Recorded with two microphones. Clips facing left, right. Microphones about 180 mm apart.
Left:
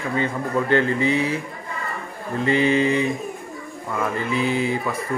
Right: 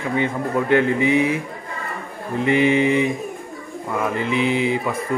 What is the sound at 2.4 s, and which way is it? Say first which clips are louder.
Speech: right 2 dB; 15° right (ahead or behind).